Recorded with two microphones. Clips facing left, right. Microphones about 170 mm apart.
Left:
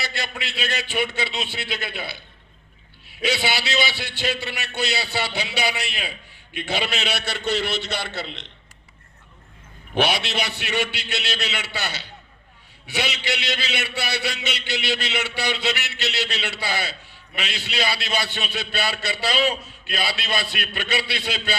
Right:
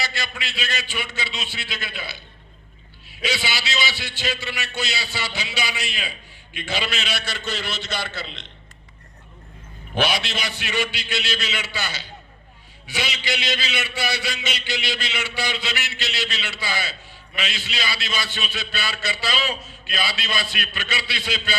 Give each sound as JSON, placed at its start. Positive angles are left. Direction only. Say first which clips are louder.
{"t": 0.0, "sound": "a man's voice", "louder": "even", "side_deg": 60}
{"t": 3.2, "sound": "a man's voice", "louder": "left 3 dB", "side_deg": 60}
{"t": 9.9, "sound": "a man's voice", "louder": "left 1 dB", "side_deg": 60}